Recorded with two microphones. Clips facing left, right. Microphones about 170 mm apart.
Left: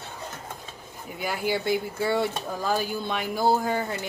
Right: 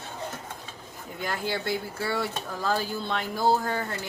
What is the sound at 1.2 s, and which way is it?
Speech, 10° left (ahead or behind).